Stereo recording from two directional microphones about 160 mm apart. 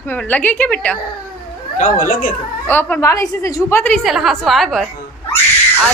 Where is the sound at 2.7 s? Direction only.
10° left (ahead or behind).